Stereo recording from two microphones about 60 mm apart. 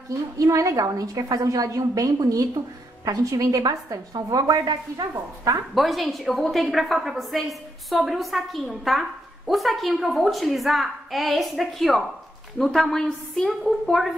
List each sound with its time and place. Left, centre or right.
0.4 s a woman's voice: right
5.8 s a woman's voice: centre